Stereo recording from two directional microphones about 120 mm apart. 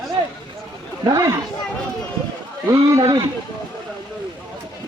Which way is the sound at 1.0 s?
25° right (ahead or behind).